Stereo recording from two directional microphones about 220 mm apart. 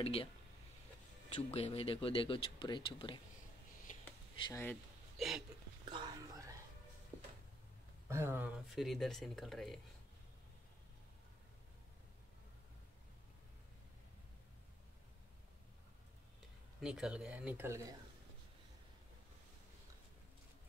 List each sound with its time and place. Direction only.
0.0 s speech: 25° left (ahead or behind)
1.5 s speech: 25° left (ahead or behind)
4.4 s speech: 15° left (ahead or behind)
5.1 s hiccup: centre (ahead or behind)
5.9 s whispering: 20° right (ahead or behind)
8.1 s speech: 10° right (ahead or behind)
16.8 s speech: 5° right (ahead or behind)